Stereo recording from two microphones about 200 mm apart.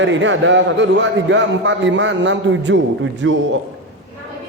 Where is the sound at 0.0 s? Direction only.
65° right (ahead or behind).